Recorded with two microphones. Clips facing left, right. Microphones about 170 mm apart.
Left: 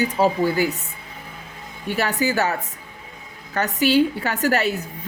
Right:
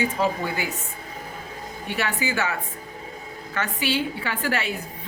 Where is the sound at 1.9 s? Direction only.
40° left (ahead or behind).